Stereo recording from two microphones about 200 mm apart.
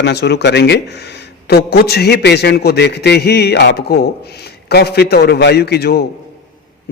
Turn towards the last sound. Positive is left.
turn(degrees=50)  # may be behind; listen again after turning